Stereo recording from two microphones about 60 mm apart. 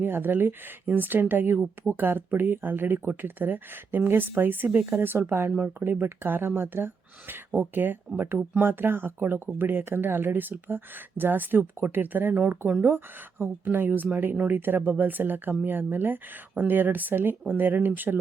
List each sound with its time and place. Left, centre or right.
0.0 s speech: right